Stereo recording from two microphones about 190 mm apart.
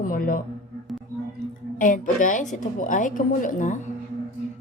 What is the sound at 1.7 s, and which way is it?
Speech, 45° left (ahead or behind).